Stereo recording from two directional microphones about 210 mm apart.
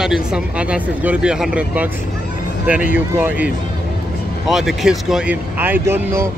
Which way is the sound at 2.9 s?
10° right (ahead or behind).